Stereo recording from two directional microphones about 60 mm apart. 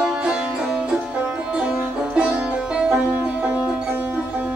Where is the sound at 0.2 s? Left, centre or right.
Centre.